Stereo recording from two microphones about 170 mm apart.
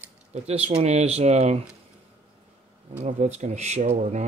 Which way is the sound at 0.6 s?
40° right (ahead or behind).